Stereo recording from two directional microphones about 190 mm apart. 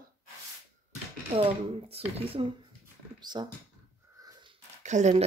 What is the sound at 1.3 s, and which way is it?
Speech, 30° right (ahead or behind).